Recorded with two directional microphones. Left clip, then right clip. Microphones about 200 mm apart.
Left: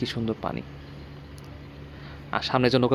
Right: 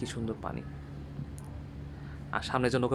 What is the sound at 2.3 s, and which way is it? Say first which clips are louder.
Speech: left 7 dB; 30° left (ahead or behind).